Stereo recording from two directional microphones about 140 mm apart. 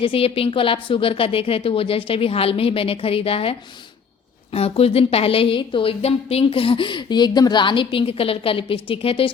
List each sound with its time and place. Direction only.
0.0 s a woman's voice: 40° left (ahead or behind)
4.5 s a woman's voice: 45° left (ahead or behind)